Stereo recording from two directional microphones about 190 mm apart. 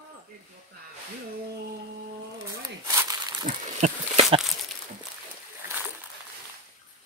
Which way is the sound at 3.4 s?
40° right (ahead or behind).